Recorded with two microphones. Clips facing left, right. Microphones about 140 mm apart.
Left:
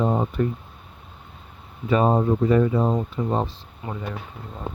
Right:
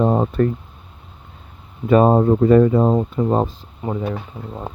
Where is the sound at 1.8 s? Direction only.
50° right (ahead or behind).